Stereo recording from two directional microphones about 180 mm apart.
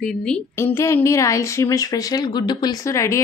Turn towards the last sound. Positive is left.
turn(degrees=15)  # may be behind; listen again after turning